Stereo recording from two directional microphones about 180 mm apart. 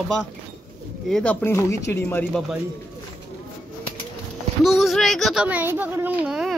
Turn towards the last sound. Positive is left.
turn(degrees=-5)  # may be behind; listen again after turning